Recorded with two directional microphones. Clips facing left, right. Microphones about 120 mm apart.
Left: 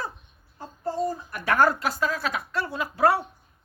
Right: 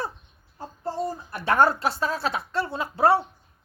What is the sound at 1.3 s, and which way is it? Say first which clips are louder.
A woman's voice: right 2 dB; 25° right (ahead or behind).